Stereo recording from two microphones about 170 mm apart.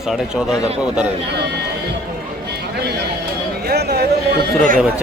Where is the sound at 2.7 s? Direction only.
70° right (ahead or behind).